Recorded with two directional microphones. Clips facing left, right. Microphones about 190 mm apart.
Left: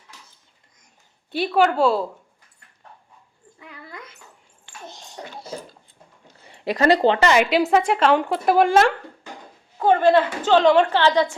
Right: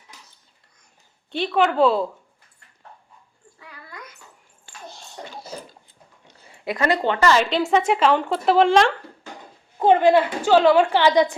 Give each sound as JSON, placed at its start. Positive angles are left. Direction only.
{"t": 1.3, "sound": "a woman's voice", "side_deg": 5}
{"t": 3.6, "sound": "a sound", "side_deg": 20}
{"t": 6.5, "sound": "a woman's voice", "side_deg": 35}
{"t": 7.7, "sound": "a woman's voice", "side_deg": 0}
{"t": 9.7, "sound": "a woman's voice", "side_deg": -20}